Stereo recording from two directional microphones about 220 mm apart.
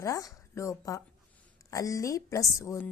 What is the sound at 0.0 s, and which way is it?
Speech, 15° left (ahead or behind).